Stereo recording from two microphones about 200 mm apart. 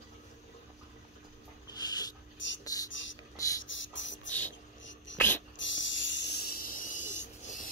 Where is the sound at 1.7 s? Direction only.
20° left (ahead or behind).